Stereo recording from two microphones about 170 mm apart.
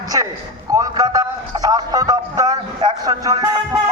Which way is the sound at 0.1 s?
20° right (ahead or behind).